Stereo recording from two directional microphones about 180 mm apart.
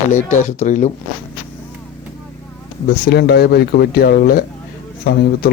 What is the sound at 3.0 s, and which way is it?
Speech, 65° left (ahead or behind).